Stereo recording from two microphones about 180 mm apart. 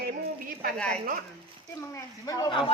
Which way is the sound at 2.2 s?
20° left (ahead or behind).